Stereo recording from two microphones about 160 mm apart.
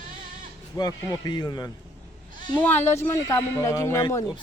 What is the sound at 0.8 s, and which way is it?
Speech, 20° left (ahead or behind).